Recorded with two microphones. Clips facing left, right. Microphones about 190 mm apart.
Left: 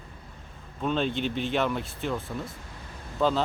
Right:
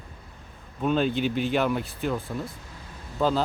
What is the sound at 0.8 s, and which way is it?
Speech, 5° right (ahead or behind).